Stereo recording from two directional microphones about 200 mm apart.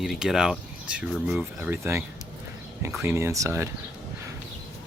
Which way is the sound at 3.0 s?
15° right (ahead or behind).